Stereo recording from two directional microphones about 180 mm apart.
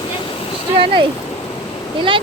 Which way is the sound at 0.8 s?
30° right (ahead or behind).